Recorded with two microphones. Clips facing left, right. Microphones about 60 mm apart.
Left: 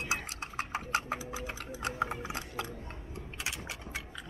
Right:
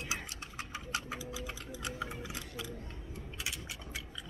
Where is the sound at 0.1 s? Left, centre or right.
Left.